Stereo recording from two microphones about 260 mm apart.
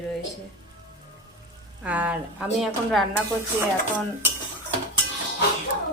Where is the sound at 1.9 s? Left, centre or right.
Centre.